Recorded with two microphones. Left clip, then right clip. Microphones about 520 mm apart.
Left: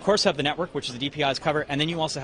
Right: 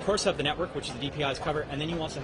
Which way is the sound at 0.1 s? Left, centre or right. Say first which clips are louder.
Left 5 dB; left.